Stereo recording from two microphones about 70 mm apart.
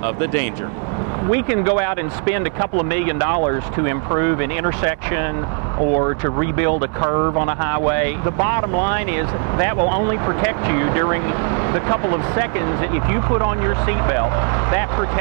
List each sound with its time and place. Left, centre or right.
0.0 s speech: left